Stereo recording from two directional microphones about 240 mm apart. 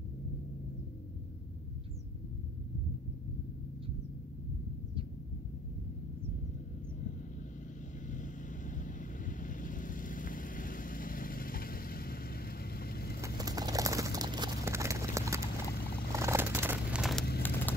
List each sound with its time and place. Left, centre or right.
8.1 s vehicle: left
13.2 s bird: centre
15.7 s vehicle: left
16.1 s crumpling: centre
17.4 s a sound: centre